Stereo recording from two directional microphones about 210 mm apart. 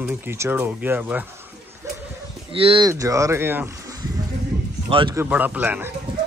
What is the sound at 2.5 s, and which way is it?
Speech, 25° right (ahead or behind).